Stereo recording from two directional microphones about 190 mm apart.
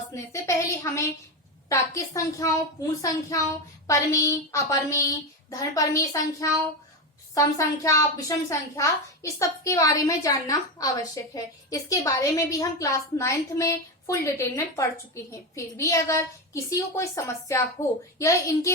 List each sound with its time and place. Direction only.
0.1 s a woman's voice: 15° left (ahead or behind)